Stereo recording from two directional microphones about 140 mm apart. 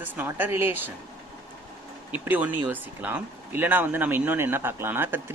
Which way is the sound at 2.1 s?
10° right (ahead or behind).